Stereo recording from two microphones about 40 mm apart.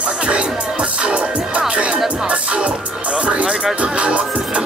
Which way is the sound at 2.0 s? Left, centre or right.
Right.